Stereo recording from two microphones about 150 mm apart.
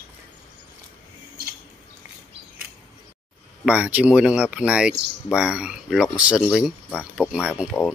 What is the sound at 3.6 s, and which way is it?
Speech, 10° right (ahead or behind).